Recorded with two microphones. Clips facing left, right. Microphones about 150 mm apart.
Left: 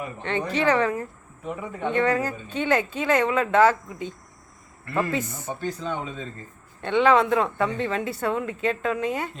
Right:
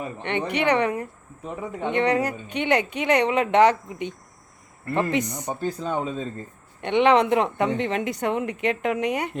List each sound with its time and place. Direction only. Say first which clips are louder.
0.0 s a woman's voice: right 1 dB; 25° right (ahead or behind)
5.1 s speech: right 3 dB; 15° right (ahead or behind)
5.5 s speech: right 2 dB; 40° right (ahead or behind)
6.8 s a woman's voice: right 1 dB; 20° right (ahead or behind)